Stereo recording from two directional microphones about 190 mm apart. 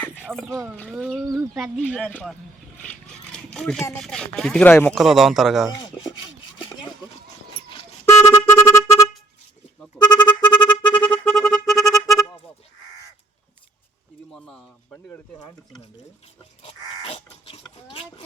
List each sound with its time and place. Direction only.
0.2 s a sound: centre (ahead or behind)
0.4 s speech: 10° right (ahead or behind)
0.8 s speech: centre (ahead or behind)
3.3 s a sound: 5° left (ahead or behind)
3.9 s speech: 5° left (ahead or behind)
4.9 s speech: centre (ahead or behind)
8.2 s music: 15° left (ahead or behind)
10.4 s music: 25° left (ahead or behind)
10.9 s music: 5° left (ahead or behind)
14.3 s a sound: 5° left (ahead or behind)
14.9 s speech: 15° left (ahead or behind)
16.6 s crow: 30° left (ahead or behind)